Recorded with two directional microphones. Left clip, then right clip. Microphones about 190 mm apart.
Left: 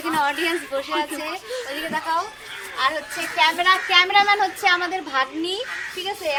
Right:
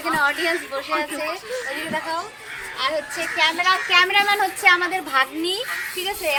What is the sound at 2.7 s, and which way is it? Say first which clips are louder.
Speech: left 1 dB; 35° left (ahead or behind).